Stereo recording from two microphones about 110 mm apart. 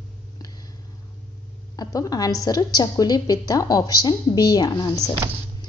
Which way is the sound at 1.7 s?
35° left (ahead or behind).